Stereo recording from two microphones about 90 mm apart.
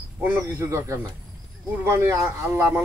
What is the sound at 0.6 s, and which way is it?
A man's voice, 35° right (ahead or behind).